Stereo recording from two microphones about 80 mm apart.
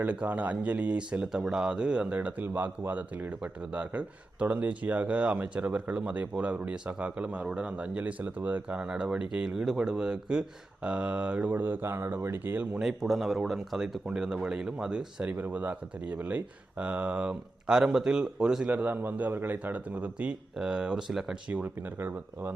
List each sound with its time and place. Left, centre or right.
0.0 s speech: centre
12.8 s speech: centre
18.7 s speech: right; by 21.3 s centre
21.5 s speech: right